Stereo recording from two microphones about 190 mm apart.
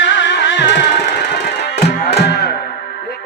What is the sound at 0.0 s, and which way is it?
Music, 70° left (ahead or behind).